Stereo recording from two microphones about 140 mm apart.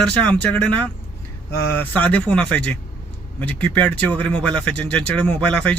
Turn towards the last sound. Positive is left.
turn(degrees=10)  # may be behind; listen again after turning